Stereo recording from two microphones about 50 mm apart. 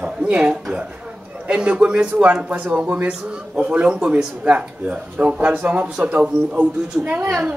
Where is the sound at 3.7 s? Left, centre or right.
Right.